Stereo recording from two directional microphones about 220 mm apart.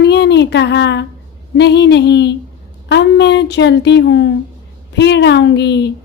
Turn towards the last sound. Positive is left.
turn(degrees=50)  # may be behind; listen again after turning